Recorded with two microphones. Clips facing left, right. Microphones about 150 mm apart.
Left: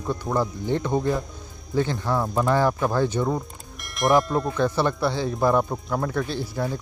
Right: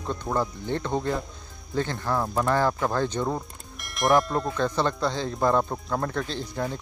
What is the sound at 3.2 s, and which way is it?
Speech, centre (ahead or behind).